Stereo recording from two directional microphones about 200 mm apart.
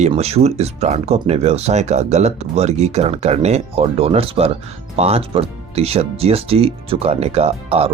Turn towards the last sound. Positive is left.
turn(degrees=-30)  # may be behind; listen again after turning